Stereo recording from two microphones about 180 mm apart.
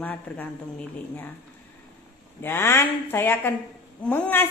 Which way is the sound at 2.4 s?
15° left (ahead or behind).